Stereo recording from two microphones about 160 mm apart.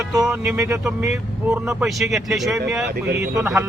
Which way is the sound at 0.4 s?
15° right (ahead or behind).